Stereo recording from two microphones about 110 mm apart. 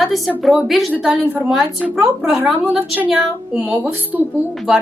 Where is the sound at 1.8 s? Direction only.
5° right (ahead or behind).